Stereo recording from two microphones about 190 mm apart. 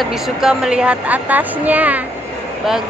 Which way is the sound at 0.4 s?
5° right (ahead or behind).